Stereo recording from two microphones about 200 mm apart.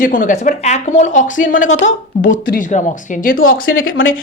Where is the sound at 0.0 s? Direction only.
40° left (ahead or behind).